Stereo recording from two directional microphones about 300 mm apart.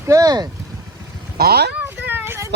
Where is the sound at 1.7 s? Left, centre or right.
Centre.